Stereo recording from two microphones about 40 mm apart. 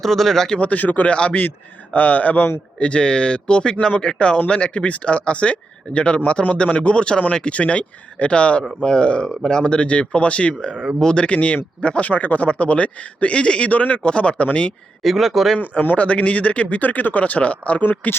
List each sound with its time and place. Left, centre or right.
0.0 s speech: centre
0.6 s a man's voice: left
1.0 s speech: left
1.3 s a man's voice: left
2.7 s speech: left
15.0 s speech: centre
16.0 s a man's voice: left